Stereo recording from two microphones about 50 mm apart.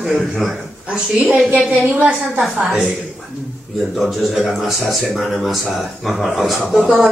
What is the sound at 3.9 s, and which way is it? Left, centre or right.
A man's voice, centre.